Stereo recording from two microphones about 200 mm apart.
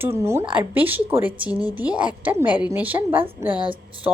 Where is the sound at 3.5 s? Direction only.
25° right (ahead or behind).